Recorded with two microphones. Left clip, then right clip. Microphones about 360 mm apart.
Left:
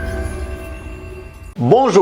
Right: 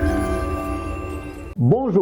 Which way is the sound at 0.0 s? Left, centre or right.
Centre.